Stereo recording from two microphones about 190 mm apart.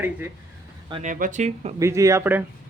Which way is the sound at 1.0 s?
45° right (ahead or behind).